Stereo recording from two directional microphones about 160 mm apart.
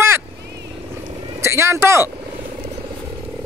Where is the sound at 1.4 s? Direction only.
15° right (ahead or behind).